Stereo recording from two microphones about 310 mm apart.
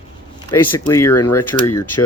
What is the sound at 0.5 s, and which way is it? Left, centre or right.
Speech, centre.